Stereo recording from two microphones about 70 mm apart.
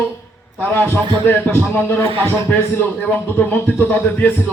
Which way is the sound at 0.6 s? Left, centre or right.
Left.